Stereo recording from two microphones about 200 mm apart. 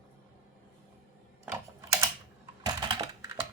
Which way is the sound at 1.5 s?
15° right (ahead or behind).